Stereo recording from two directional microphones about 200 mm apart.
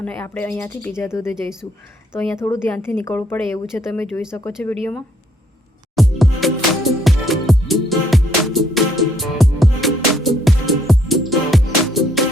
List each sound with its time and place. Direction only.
0.0 s speech: 10° left (ahead or behind)
6.0 s music: centre (ahead or behind)